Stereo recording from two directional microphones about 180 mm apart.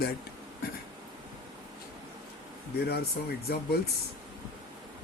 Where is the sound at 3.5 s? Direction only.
65° left (ahead or behind).